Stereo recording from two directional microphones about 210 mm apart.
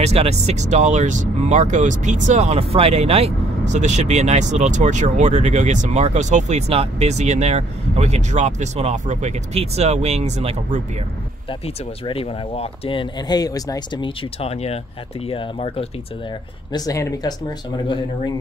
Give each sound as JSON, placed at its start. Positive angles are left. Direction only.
{"t": 0.0, "sound": "speech", "side_deg": -30}
{"t": 11.6, "sound": "speech", "side_deg": 25}
{"t": 16.7, "sound": "speech", "side_deg": 15}